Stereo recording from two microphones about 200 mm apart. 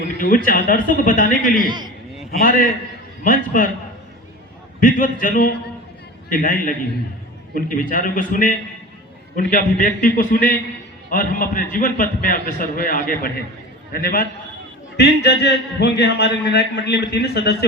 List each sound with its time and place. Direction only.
0.2 s a man's voice: 45° left (ahead or behind)
1.5 s a man's voice: 20° right (ahead or behind)
2.4 s a man's voice: 45° left (ahead or behind)
4.8 s a man's voice: 45° left (ahead or behind)